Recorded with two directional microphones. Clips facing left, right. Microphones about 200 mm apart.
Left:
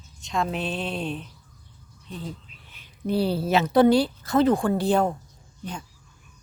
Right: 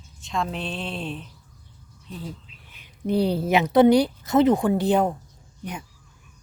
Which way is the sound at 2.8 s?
20° right (ahead or behind).